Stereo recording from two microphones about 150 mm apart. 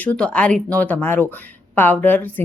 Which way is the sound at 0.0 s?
10° left (ahead or behind).